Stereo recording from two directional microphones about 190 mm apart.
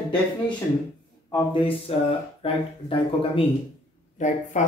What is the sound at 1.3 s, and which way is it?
Speech, 30° left (ahead or behind).